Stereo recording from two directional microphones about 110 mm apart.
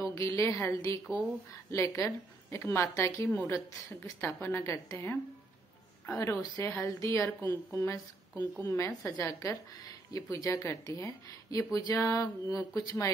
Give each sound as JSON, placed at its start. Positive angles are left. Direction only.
{"t": 0.0, "sound": "a woman's voice", "side_deg": 30}